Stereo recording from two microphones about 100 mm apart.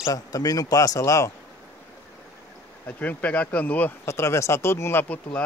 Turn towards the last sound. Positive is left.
turn(degrees=15)  # may be behind; listen again after turning